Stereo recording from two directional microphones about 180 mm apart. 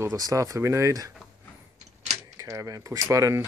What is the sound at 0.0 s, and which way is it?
Speech, 20° right (ahead or behind).